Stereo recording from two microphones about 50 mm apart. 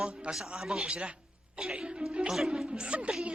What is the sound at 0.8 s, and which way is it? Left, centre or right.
Speech, right.